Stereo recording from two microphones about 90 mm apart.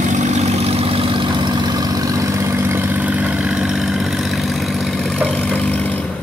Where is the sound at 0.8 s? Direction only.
90° right; by 6.0 s 15° left (ahead or behind).